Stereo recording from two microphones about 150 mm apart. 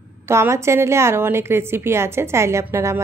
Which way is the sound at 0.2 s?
20° right (ahead or behind).